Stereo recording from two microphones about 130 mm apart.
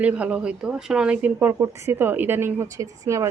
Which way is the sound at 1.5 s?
25° right (ahead or behind).